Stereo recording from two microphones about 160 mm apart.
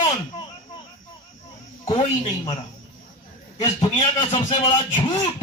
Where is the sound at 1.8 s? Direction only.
30° left (ahead or behind).